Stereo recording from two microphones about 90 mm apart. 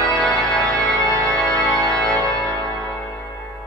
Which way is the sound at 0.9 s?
35° right (ahead or behind).